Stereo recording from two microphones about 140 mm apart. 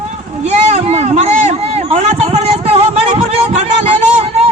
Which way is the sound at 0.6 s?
50° right (ahead or behind).